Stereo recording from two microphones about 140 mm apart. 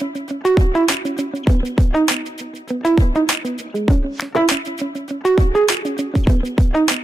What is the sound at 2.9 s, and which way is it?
Music, centre (ahead or behind).